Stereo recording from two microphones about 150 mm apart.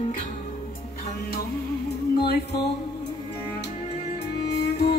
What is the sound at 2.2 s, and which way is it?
Music, 90° left.